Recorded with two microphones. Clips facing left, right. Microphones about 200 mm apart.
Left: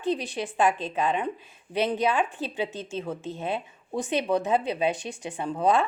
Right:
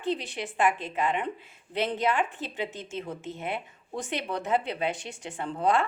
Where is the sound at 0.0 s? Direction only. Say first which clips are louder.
Left 3 dB; 15° left (ahead or behind).